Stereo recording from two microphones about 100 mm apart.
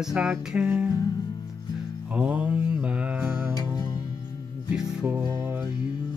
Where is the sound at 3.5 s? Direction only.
40° left (ahead or behind).